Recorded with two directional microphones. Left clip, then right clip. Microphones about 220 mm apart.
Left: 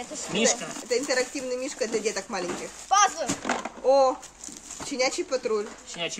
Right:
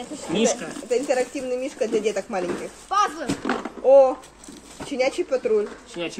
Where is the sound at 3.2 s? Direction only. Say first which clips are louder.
Right 2 dB; 20° left (ahead or behind).